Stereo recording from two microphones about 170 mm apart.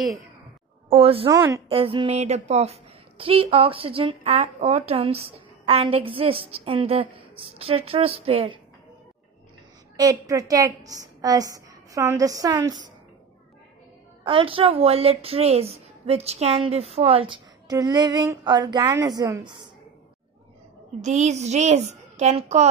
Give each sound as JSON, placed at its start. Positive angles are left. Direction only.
{"t": 0.8, "sound": "speech", "side_deg": -35}
{"t": 1.3, "sound": "a woman's voice", "side_deg": -20}
{"t": 1.7, "sound": "a woman's voice", "side_deg": -35}
{"t": 9.9, "sound": "a woman's voice", "side_deg": -20}
{"t": 14.2, "sound": "a woman's voice", "side_deg": -30}
{"t": 21.0, "sound": "a woman's voice", "side_deg": -45}